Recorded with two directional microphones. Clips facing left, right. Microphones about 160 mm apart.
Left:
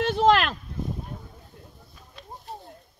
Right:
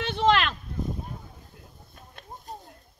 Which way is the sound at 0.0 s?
Centre (ahead or behind).